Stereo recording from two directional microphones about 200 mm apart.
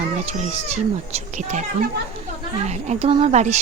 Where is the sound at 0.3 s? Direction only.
35° right (ahead or behind).